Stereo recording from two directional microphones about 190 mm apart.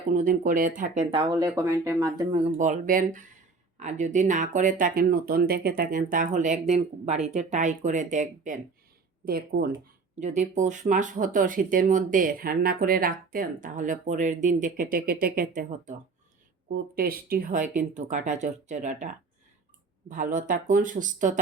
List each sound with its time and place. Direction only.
0.1 s speech: 45° right (ahead or behind)
1.1 s speech: 25° right (ahead or behind)
2.4 s speech: 40° right (ahead or behind)
9.2 s speech: 50° right (ahead or behind)
10.2 s speech: 40° right (ahead or behind)